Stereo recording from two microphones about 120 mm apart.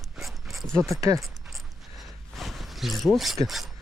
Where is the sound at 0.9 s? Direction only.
30° right (ahead or behind).